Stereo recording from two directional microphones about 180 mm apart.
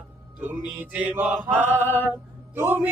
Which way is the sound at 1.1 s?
10° right (ahead or behind).